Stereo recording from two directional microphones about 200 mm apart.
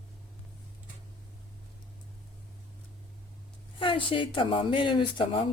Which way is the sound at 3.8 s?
25° left (ahead or behind).